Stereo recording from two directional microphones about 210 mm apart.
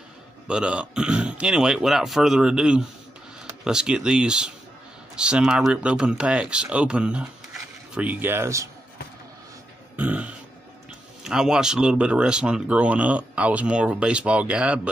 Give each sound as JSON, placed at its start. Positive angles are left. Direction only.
{"t": 0.5, "sound": "speech", "side_deg": -5}
{"t": 9.9, "sound": "burping", "side_deg": -5}
{"t": 11.2, "sound": "speech", "side_deg": -5}